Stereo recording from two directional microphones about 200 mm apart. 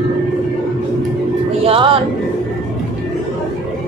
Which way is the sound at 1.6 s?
30° right (ahead or behind).